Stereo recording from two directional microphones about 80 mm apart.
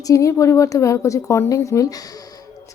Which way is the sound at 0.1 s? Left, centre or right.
Left.